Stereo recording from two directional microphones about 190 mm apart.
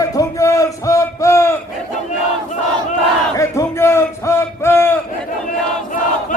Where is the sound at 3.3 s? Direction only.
15° left (ahead or behind).